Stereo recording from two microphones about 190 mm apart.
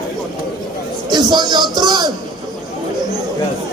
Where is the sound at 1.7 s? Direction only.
20° right (ahead or behind).